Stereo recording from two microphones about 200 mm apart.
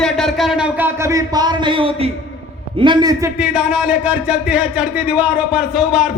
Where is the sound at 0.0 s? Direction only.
Centre (ahead or behind).